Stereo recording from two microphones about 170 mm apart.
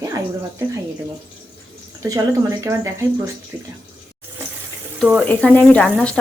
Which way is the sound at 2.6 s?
20° right (ahead or behind).